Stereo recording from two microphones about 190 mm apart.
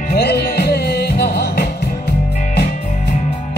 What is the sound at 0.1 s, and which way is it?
Music, 55° left (ahead or behind).